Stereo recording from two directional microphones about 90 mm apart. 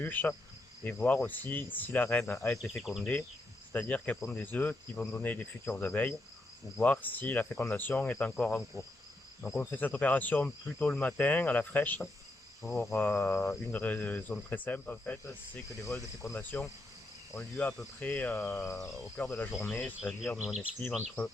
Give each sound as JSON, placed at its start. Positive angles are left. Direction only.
{"t": 0.0, "sound": "cricket", "side_deg": 20}
{"t": 2.5, "sound": "cricket", "side_deg": 5}
{"t": 3.7, "sound": "cricket", "side_deg": 20}
{"t": 12.6, "sound": "cricket", "side_deg": 5}
{"t": 13.0, "sound": "cricket", "side_deg": 20}
{"t": 19.5, "sound": "cricket", "side_deg": 0}
{"t": 20.6, "sound": "cricket", "side_deg": 20}